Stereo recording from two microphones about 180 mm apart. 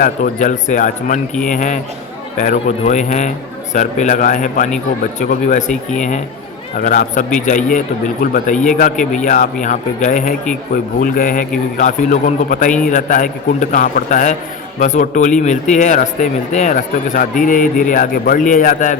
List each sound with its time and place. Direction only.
0.0 s speech: 45° left (ahead or behind)